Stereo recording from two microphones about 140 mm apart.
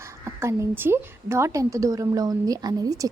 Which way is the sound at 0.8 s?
20° right (ahead or behind).